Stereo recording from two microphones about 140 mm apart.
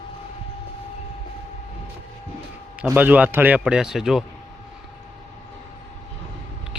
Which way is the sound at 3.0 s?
10° right (ahead or behind).